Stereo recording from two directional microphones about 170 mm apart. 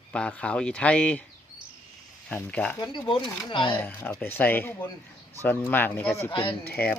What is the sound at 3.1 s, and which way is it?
Speech, 30° left (ahead or behind).